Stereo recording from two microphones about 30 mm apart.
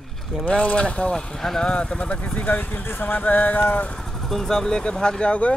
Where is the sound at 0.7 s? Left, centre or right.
Left.